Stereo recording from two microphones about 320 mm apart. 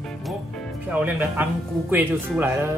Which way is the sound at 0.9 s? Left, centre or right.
Centre.